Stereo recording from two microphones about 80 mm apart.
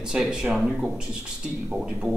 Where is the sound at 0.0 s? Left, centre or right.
Centre.